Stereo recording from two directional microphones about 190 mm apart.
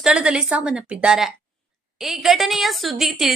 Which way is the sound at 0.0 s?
5° right (ahead or behind).